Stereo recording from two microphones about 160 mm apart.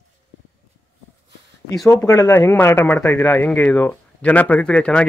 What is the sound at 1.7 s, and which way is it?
Speech, 20° left (ahead or behind).